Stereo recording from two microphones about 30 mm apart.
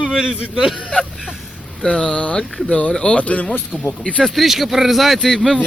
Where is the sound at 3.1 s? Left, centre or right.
Left.